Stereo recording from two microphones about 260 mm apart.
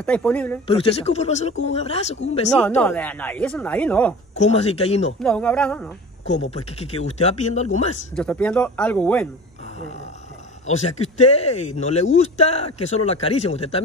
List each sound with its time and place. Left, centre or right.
0.0 s speech: centre
0.7 s speech: left
2.5 s speech: centre
4.4 s speech: left
5.2 s speech: centre
6.2 s speech: left
8.2 s speech: centre
10.7 s speech: left